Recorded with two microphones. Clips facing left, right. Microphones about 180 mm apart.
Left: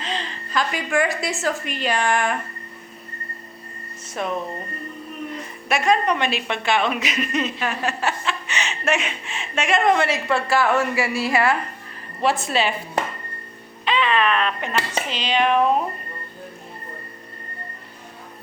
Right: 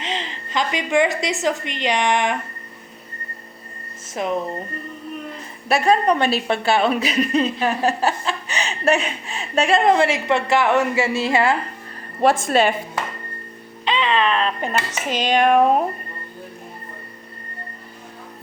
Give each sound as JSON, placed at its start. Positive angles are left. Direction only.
{"t": 0.0, "sound": "a woman's voice", "side_deg": -20}
{"t": 4.1, "sound": "speech", "side_deg": -20}
{"t": 5.6, "sound": "a woman's voice", "side_deg": -35}
{"t": 12.2, "sound": "a woman's voice", "side_deg": -50}
{"t": 13.8, "sound": "a woman's voice", "side_deg": -25}